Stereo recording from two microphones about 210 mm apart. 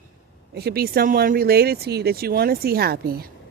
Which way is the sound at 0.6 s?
50° right (ahead or behind).